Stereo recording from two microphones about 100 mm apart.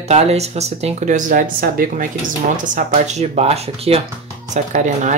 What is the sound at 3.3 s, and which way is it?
Speech, 90° right.